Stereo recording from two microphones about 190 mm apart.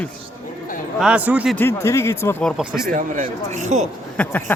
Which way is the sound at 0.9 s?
5° right (ahead or behind).